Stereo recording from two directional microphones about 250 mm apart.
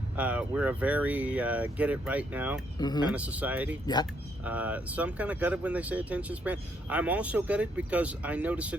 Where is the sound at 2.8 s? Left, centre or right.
Centre.